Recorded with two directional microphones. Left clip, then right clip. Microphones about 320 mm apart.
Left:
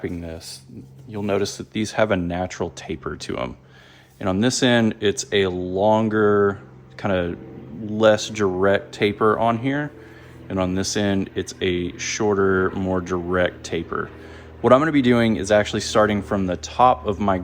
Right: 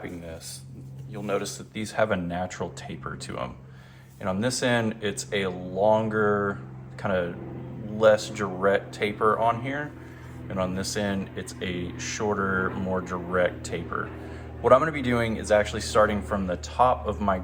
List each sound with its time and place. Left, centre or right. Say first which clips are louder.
1.1 s speech: left 6 dB; left